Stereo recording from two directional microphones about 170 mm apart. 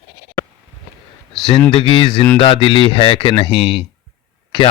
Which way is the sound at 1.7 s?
30° left (ahead or behind).